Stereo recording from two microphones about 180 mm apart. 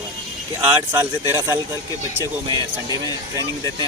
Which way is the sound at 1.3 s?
15° right (ahead or behind).